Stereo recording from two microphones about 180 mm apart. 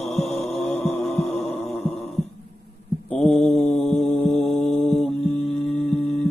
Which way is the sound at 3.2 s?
5° left (ahead or behind).